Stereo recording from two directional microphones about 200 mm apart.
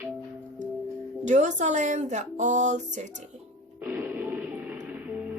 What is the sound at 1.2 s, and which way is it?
Speech, 35° right (ahead or behind).